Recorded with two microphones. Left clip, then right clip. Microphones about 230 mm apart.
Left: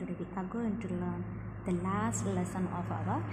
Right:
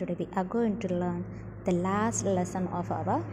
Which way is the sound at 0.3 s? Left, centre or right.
Right.